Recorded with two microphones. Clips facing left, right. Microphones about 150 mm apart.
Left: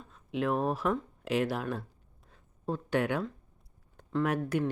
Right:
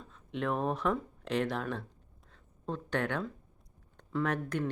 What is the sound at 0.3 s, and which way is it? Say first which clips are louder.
Speech: left 3 dB; 5° left (ahead or behind).